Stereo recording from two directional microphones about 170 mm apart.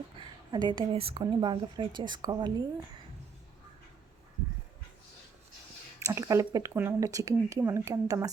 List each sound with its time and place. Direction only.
0.2 s a woman's voice: 25° right (ahead or behind)
6.1 s a woman's voice: 20° right (ahead or behind)